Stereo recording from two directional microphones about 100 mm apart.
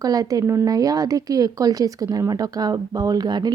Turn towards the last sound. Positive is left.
turn(degrees=-45)  # may be behind; listen again after turning